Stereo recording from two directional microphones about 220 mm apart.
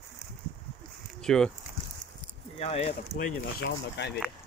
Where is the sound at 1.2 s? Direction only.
Centre (ahead or behind).